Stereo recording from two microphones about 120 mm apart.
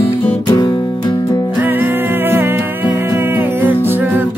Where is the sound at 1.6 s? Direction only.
15° right (ahead or behind).